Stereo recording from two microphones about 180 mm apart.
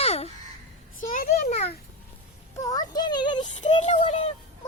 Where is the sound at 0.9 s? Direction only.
50° left (ahead or behind).